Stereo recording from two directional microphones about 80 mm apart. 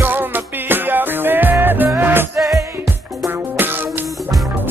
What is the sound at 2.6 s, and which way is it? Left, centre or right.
Music, right.